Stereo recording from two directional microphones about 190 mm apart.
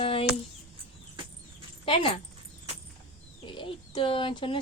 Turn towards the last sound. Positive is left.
turn(degrees=25)  # may be behind; listen again after turning